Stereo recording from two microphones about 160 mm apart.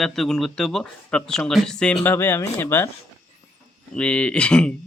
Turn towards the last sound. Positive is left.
turn(degrees=5)  # may be behind; listen again after turning